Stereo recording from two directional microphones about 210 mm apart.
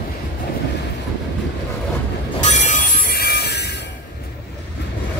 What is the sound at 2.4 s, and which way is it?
Train, 35° left (ahead or behind).